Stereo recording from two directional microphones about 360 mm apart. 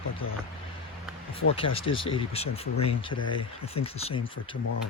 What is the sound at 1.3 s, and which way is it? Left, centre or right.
Speech, centre.